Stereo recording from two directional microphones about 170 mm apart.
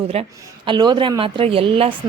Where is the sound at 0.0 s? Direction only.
35° right (ahead or behind).